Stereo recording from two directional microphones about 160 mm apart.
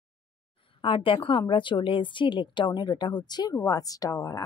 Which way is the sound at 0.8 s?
35° left (ahead or behind).